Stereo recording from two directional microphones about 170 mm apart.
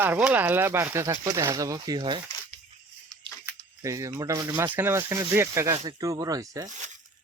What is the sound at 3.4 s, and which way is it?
Speech, 20° right (ahead or behind).